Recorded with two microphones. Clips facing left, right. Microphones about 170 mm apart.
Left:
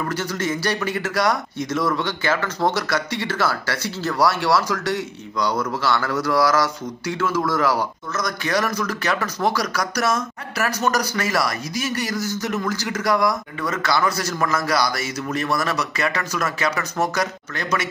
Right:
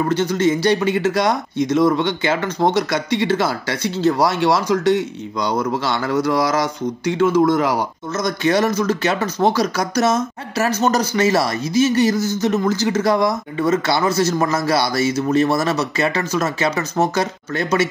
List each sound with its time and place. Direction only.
0.0 s speech: 20° right (ahead or behind)